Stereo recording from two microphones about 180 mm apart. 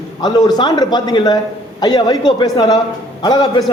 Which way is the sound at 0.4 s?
25° left (ahead or behind).